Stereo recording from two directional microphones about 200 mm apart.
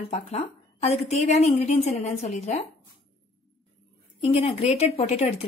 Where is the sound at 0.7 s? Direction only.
35° left (ahead or behind).